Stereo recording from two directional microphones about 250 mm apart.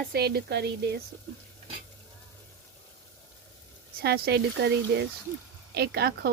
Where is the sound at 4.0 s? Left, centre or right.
Right.